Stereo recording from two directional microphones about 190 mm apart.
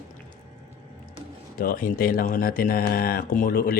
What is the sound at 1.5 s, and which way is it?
Speech, 50° left (ahead or behind).